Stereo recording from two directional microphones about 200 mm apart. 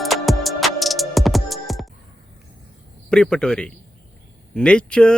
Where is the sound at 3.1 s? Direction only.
5° left (ahead or behind).